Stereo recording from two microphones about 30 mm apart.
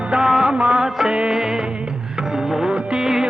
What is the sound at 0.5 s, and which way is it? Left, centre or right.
Music, right.